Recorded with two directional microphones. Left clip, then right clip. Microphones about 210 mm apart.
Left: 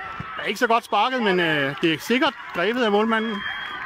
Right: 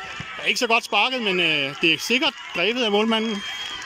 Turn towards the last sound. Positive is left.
turn(degrees=-10)  # may be behind; listen again after turning